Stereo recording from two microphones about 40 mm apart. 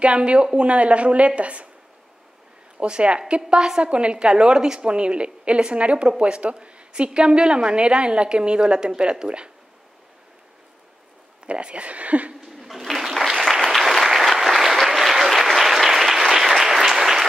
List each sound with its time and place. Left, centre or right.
0.0 s a woman's voice: right
2.8 s a woman's voice: right
11.4 s a woman's voice: right
12.4 s a sound: centre
13.7 s applause: centre